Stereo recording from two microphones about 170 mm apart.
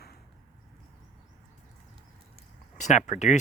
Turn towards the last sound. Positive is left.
turn(degrees=45)  # may be behind; listen again after turning